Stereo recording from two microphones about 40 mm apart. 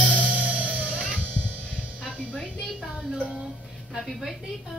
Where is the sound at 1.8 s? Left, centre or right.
Right.